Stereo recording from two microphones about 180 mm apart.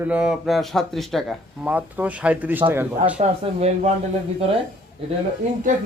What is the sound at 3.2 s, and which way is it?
Speech, 40° right (ahead or behind).